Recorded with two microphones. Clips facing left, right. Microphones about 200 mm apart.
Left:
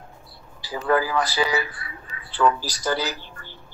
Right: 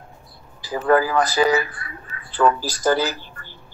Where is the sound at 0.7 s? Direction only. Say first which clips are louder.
Right 4 dB; 50° right (ahead or behind).